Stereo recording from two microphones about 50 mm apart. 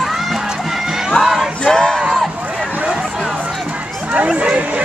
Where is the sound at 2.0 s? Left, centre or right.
Centre.